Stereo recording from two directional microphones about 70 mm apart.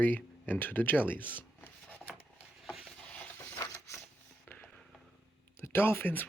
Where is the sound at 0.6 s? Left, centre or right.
Left.